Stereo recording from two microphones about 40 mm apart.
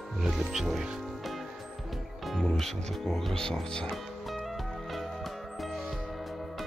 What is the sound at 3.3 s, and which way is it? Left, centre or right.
Speech, centre.